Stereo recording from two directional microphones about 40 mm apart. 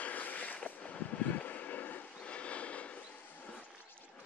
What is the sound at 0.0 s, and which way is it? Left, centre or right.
Vehicle, left.